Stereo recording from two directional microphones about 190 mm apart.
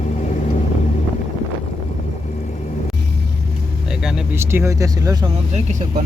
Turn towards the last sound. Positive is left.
turn(degrees=-20)  # may be behind; listen again after turning